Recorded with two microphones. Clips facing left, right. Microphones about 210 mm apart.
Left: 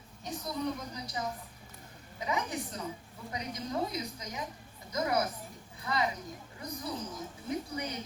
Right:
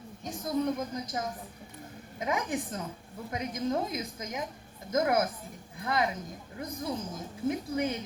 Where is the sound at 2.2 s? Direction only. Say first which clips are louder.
Right 3 dB; 50° right (ahead or behind).